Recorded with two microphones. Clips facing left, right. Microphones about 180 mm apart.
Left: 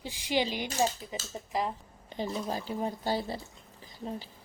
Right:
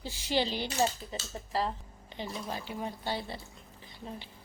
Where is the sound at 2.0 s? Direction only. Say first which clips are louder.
Left 5 dB; 40° left (ahead or behind).